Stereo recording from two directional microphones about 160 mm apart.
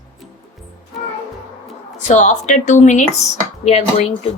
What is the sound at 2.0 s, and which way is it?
A woman's voice, 50° left (ahead or behind).